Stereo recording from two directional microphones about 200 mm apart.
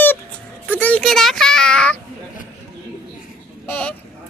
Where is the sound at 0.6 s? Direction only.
10° left (ahead or behind).